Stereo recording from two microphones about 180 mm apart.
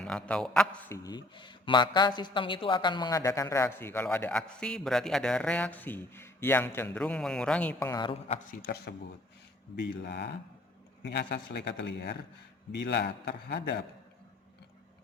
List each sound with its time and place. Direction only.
0.0 s a man's voice: 5° left (ahead or behind)
0.9 s speech: 20° left (ahead or behind)
8.6 s speech: 65° left (ahead or behind)